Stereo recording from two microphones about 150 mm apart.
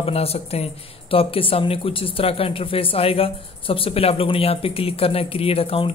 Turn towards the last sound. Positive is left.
turn(degrees=40)  # may be behind; listen again after turning